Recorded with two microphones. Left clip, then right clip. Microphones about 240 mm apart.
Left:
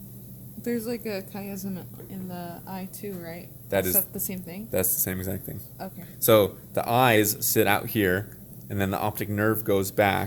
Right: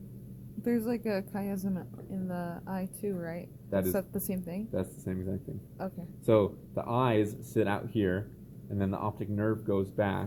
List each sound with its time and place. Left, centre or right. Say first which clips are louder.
0.6 s a woman's voice: left 2 dB; centre
3.7 s a woman's voice: left 6 dB; left
3.9 s a woman's voice: even; centre
4.7 s speech: left 10 dB; left